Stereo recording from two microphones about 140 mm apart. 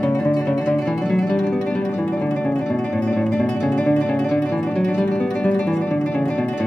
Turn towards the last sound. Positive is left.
turn(degrees=5)  # may be behind; listen again after turning